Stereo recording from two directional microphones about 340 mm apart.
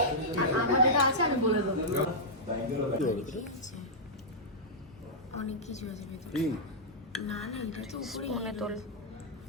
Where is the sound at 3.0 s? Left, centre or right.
Left.